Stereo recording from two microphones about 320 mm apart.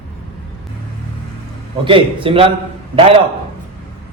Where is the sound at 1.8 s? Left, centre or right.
Centre.